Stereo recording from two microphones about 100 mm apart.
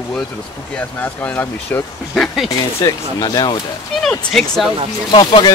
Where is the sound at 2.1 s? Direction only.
Centre (ahead or behind).